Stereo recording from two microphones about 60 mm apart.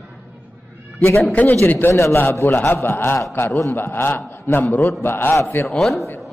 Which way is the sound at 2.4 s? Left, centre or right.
Left.